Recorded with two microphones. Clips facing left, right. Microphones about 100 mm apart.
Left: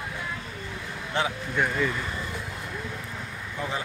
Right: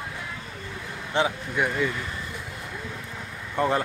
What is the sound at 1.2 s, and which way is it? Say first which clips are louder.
Speech: right 4 dB; 20° right (ahead or behind).